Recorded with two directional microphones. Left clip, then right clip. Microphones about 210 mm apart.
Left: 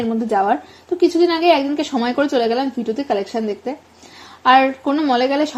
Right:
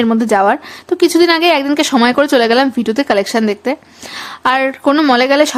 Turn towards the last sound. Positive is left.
turn(degrees=-25)  # may be behind; listen again after turning